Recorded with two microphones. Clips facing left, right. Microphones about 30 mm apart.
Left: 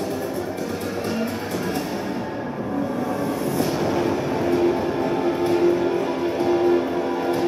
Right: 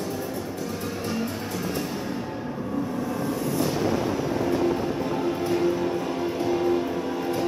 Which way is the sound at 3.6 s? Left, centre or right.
Centre.